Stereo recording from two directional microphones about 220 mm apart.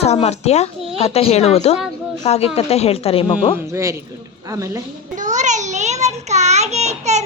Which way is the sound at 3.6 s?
15° right (ahead or behind).